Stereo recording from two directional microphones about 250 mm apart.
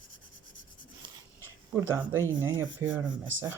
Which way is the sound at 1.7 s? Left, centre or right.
Centre.